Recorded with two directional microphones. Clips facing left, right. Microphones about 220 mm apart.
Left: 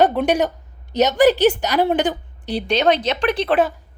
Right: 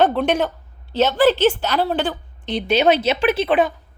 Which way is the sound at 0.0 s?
15° left (ahead or behind).